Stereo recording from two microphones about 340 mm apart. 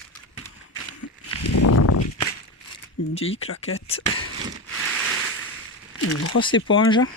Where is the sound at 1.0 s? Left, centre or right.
Left.